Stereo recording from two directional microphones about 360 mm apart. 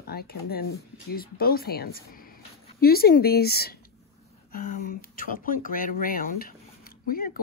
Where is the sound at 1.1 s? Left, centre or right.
Left.